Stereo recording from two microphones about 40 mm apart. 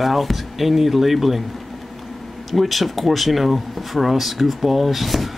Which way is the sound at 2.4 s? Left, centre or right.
Centre.